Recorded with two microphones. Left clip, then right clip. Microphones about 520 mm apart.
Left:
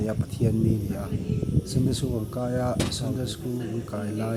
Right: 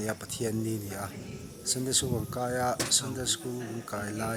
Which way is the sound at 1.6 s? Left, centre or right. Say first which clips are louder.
Right 3 dB; right.